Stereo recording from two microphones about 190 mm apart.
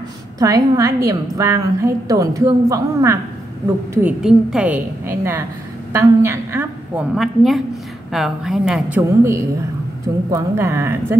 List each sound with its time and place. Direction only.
0.4 s a woman's voice: 20° right (ahead or behind)
7.2 s a woman's voice: centre (ahead or behind)